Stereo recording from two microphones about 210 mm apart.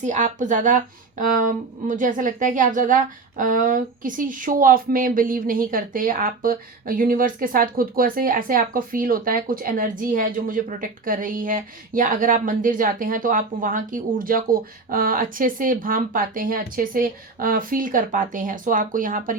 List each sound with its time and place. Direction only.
0.0 s speech: 35° right (ahead or behind)